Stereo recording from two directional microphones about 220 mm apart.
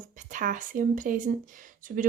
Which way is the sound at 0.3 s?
35° right (ahead or behind).